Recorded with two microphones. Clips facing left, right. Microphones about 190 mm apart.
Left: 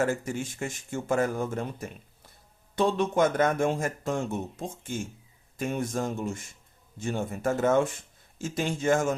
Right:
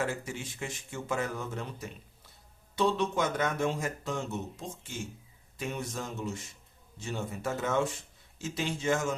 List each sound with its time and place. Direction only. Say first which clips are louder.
0.0 s speech: left 6 dB; 45° left (ahead or behind)